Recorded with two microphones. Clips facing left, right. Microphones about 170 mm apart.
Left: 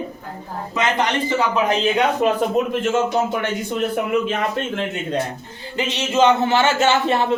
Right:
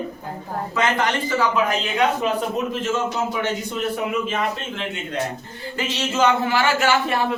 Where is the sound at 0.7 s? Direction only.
20° left (ahead or behind).